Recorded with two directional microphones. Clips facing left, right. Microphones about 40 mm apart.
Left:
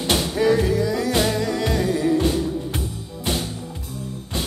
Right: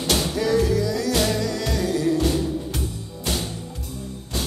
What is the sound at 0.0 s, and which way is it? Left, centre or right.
Music, left.